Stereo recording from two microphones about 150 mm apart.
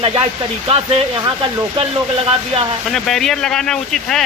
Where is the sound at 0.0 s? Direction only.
40° right (ahead or behind).